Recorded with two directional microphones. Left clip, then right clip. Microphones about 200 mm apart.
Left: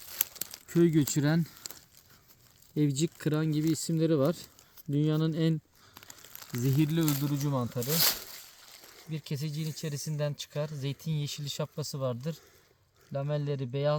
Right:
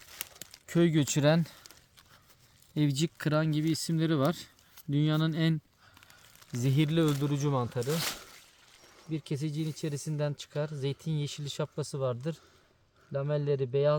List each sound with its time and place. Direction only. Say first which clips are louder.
0.2 s crumpling: left 7 dB; 35° left (ahead or behind)
0.7 s speech: left 1 dB; 50° right (ahead or behind)
2.7 s speech: left 1 dB; 45° right (ahead or behind)
5.9 s a sound: left 6 dB; 40° left (ahead or behind)
6.7 s speech: right 2 dB; 50° right (ahead or behind)
7.9 s a sound: left 6 dB; 45° left (ahead or behind)
9.0 s speech: right 4 dB; 15° right (ahead or behind)